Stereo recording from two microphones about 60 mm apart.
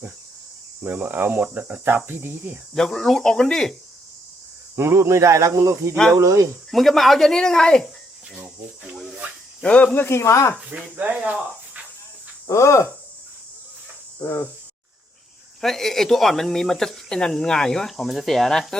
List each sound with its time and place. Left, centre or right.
0.9 s speech: right
2.7 s speech: centre
4.8 s speech: right
6.7 s speech: centre
9.6 s speech: left
10.2 s speech: left
10.9 s speech: right
11.2 s speech: centre
12.5 s speech: left
14.2 s cricket: left
15.6 s speech: centre